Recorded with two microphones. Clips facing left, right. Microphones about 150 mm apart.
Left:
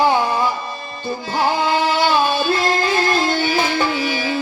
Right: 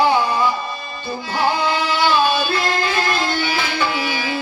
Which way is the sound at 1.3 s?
45° left (ahead or behind).